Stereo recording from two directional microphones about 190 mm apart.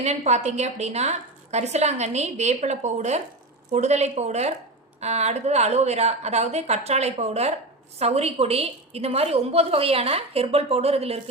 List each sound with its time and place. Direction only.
0.0 s a woman's voice: 35° right (ahead or behind)